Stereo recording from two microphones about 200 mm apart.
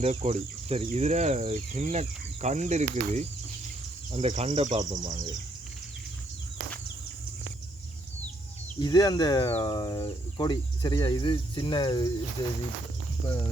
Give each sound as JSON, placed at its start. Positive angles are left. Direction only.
{"t": 0.0, "sound": "speech", "side_deg": -35}
{"t": 8.8, "sound": "speech", "side_deg": 20}